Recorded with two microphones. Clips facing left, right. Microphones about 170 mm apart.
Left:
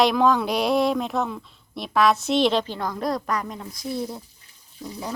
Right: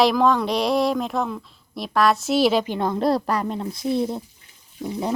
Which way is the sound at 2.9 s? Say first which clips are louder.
Right 6 dB; 30° right (ahead or behind).